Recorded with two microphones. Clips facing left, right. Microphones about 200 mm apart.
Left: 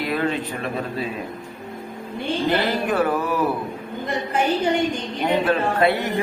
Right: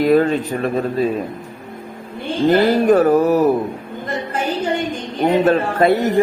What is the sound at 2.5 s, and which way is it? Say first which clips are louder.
Speech: right 11 dB; 45° right (ahead or behind).